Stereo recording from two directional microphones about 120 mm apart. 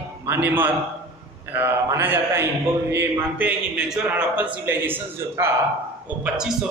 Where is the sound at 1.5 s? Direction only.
20° right (ahead or behind).